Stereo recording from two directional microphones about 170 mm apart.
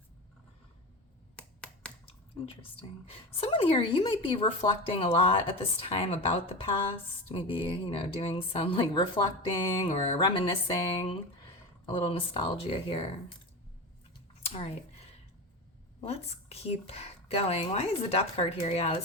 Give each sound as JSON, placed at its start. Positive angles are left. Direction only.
{"t": 1.4, "sound": "finger snapping", "side_deg": 5}
{"t": 3.1, "sound": "speech", "side_deg": 35}
{"t": 14.4, "sound": "a sound", "side_deg": 35}
{"t": 16.0, "sound": "speech", "side_deg": 35}